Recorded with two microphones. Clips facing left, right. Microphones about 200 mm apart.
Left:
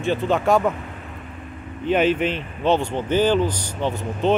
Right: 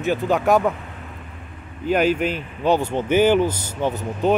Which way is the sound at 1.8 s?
5° right (ahead or behind).